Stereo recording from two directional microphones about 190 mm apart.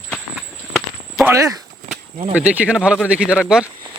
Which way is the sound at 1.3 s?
15° right (ahead or behind).